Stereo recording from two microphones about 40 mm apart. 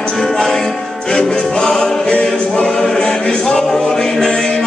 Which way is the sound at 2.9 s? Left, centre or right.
Centre.